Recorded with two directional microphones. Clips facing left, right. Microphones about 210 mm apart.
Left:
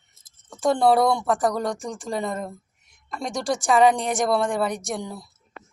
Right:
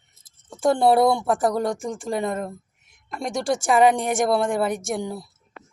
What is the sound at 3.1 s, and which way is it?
Speech, 25° right (ahead or behind).